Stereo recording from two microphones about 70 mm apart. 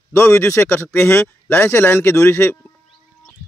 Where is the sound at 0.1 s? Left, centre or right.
Left.